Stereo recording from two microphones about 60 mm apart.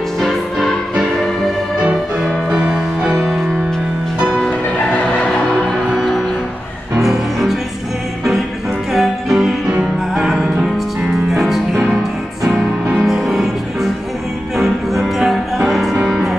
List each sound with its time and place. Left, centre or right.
0.2 s music: centre
1.8 s music: centre
5.9 s music: centre
7.0 s music: centre
8.9 s music: centre
13.0 s music: centre